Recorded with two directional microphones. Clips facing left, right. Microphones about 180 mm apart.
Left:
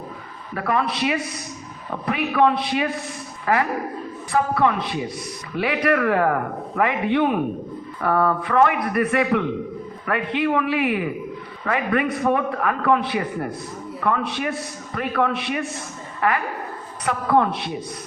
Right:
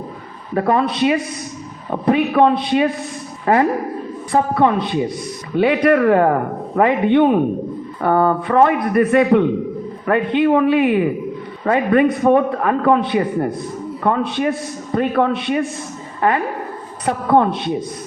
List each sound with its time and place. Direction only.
0.5 s a man's voice: 30° right (ahead or behind)
17.1 s a man's voice: 30° right (ahead or behind)